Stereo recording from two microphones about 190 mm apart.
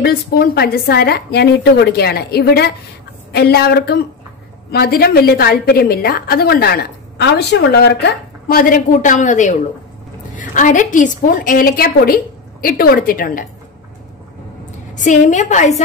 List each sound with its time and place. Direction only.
0.0 s a woman's voice: 55° left (ahead or behind)
15.0 s a woman's voice: 40° left (ahead or behind)